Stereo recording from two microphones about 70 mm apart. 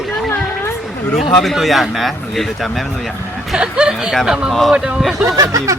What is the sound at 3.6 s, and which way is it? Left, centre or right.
Speech, centre.